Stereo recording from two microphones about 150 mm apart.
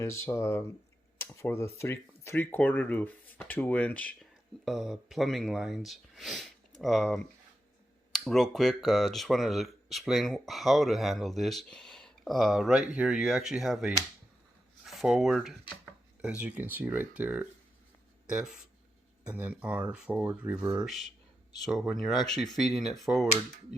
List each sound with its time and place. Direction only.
0.0 s speech: 15° left (ahead or behind)
4.6 s speech: centre (ahead or behind)
21.7 s speech: centre (ahead or behind)